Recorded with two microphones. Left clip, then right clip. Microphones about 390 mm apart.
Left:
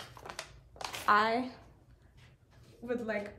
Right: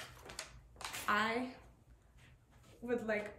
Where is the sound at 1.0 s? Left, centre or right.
Centre.